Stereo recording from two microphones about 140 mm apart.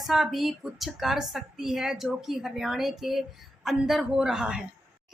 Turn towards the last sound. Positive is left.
turn(degrees=-5)  # may be behind; listen again after turning